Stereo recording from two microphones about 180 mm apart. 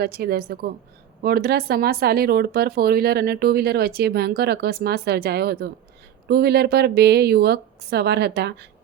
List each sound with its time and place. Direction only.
0.0 s speech: 60° right (ahead or behind)